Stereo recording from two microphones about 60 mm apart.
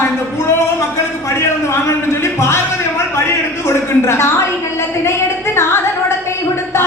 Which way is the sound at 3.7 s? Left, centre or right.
Left.